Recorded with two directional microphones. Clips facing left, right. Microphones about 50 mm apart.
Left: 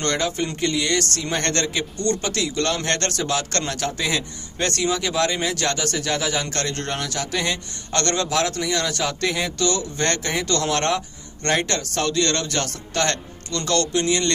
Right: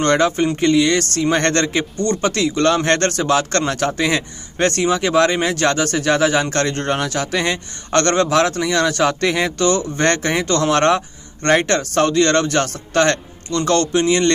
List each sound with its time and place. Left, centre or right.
0.0 s a man's voice: right